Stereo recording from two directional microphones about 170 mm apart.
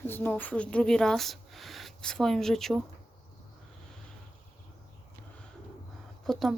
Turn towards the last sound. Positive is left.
turn(degrees=0)  # may be behind; listen again after turning